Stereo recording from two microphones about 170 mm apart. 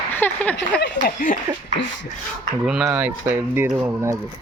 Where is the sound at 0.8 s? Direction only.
60° left (ahead or behind).